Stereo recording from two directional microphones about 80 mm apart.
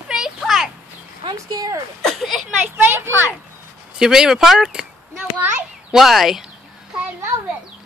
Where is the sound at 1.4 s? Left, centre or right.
Right.